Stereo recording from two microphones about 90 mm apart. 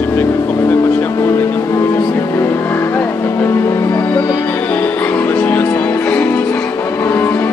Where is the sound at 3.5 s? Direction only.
35° left (ahead or behind).